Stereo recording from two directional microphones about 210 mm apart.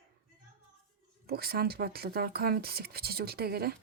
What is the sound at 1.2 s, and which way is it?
Speech, 45° right (ahead or behind).